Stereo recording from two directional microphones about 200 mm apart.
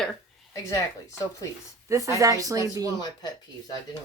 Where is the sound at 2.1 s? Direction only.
15° right (ahead or behind).